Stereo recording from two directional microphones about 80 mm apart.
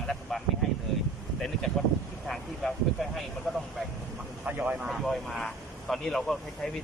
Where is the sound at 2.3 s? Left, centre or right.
Centre.